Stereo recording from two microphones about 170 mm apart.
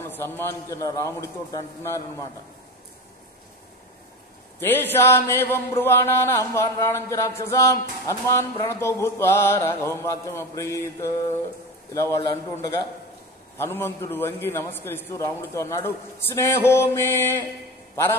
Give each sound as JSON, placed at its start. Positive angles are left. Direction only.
{"t": 0.1, "sound": "a man's voice", "side_deg": 15}
{"t": 4.6, "sound": "a man's voice", "side_deg": 10}
{"t": 13.6, "sound": "a man's voice", "side_deg": 15}